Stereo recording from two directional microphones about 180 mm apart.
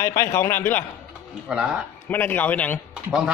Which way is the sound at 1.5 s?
5° right (ahead or behind).